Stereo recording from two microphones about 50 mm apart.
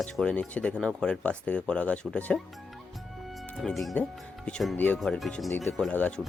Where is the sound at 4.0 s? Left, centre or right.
Left.